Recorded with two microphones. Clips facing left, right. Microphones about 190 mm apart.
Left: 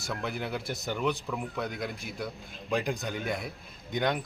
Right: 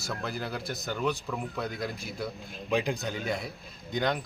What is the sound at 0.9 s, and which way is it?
Speech, 20° left (ahead or behind).